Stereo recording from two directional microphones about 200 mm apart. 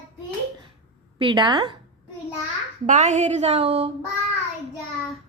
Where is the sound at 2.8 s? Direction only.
35° right (ahead or behind).